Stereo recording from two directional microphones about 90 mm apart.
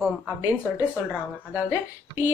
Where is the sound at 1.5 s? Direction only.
25° right (ahead or behind).